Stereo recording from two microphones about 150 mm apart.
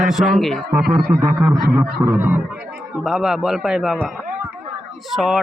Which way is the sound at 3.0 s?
Centre (ahead or behind).